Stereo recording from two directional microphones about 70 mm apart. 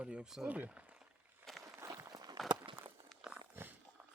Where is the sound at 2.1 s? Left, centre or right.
Right.